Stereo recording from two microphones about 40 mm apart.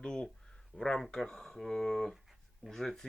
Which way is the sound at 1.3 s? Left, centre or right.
Centre.